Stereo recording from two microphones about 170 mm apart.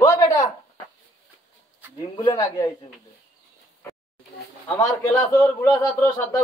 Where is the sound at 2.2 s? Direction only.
20° left (ahead or behind).